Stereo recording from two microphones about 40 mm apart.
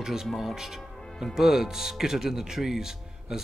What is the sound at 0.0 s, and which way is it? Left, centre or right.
Speech, centre.